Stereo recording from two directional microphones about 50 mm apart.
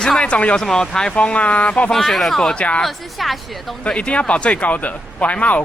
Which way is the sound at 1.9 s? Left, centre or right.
Centre.